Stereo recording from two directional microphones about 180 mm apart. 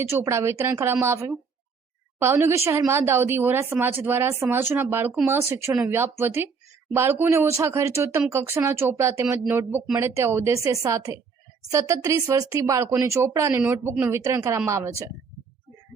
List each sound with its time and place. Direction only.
0.0 s a woman's voice: 15° right (ahead or behind)